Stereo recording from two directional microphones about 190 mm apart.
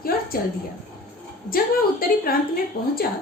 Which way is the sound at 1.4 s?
50° left (ahead or behind).